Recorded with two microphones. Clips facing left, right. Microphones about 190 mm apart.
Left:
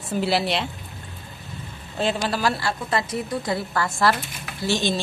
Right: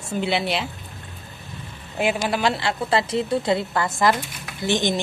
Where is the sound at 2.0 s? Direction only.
15° right (ahead or behind).